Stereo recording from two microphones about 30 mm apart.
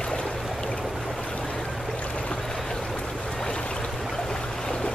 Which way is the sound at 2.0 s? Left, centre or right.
Left.